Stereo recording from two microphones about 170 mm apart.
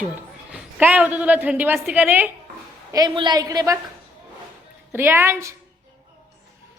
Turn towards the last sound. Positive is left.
turn(degrees=-15)  # may be behind; listen again after turning